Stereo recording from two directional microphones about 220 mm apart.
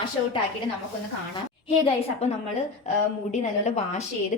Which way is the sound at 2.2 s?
30° left (ahead or behind).